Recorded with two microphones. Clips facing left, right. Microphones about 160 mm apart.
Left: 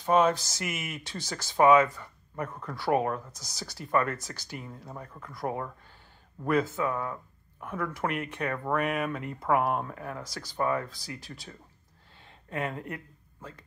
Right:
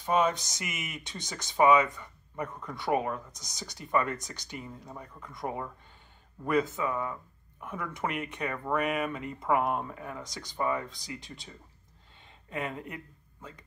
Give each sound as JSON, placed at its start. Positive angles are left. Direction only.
{"t": 0.0, "sound": "speech", "side_deg": 5}
{"t": 12.4, "sound": "speech", "side_deg": 0}